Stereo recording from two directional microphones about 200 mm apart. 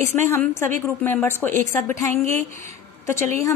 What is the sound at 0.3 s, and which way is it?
A woman's voice, 15° left (ahead or behind).